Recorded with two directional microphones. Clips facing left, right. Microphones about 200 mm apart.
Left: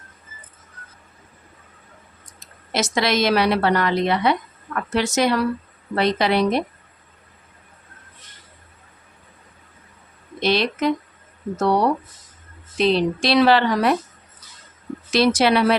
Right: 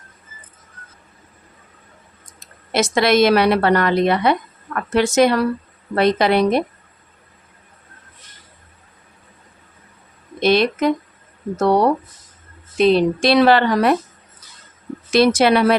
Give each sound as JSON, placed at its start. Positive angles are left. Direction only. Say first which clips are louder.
{"t": 2.7, "sound": "a woman's voice", "louder": "right 5 dB", "side_deg": -55}
{"t": 10.4, "sound": "a woman's voice", "louder": "right 4 dB", "side_deg": -50}
{"t": 12.7, "sound": "a woman's voice", "louder": "right 4 dB", "side_deg": -50}
{"t": 15.1, "sound": "a woman's voice", "louder": "right 3 dB", "side_deg": -55}